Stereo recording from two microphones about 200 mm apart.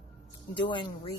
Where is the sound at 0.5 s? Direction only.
25° left (ahead or behind).